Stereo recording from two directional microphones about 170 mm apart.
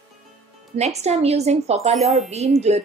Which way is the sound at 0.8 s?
40° right (ahead or behind).